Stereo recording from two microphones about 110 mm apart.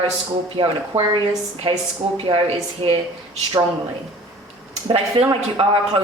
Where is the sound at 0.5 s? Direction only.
50° right (ahead or behind).